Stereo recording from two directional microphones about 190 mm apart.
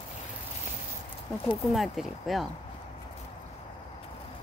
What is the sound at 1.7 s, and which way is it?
Speech, centre (ahead or behind).